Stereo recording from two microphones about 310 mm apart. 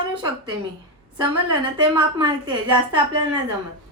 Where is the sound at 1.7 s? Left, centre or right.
Centre.